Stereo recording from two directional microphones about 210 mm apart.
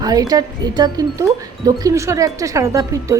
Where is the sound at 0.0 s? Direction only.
15° right (ahead or behind).